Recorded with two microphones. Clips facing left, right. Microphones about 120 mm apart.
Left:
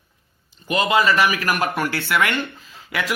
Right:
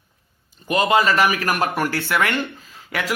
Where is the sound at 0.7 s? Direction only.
40° right (ahead or behind).